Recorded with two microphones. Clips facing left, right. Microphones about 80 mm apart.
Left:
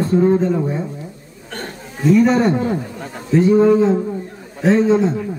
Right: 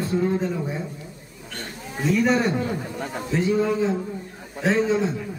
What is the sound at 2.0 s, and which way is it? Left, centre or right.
Speech, centre.